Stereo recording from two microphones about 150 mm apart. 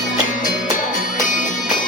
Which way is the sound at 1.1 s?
60° left (ahead or behind).